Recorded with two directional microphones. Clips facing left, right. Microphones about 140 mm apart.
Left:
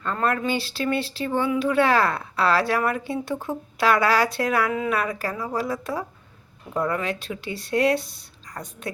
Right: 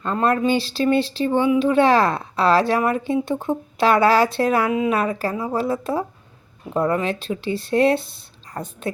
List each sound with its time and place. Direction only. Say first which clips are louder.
0.0 s speech: right 5 dB; 25° right (ahead or behind)